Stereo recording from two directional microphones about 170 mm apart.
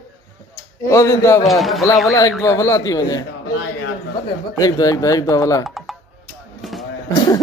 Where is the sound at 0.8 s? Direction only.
20° left (ahead or behind).